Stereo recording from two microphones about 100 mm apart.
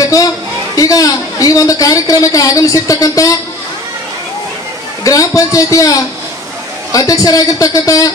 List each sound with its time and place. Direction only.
0.0 s a sound: 35° left (ahead or behind)
0.7 s a woman's voice: 35° left (ahead or behind)
5.0 s a woman's voice: 35° left (ahead or behind)